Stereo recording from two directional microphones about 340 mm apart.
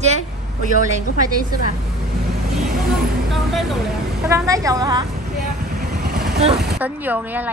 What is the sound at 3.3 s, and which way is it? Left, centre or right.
A woman's voice, centre.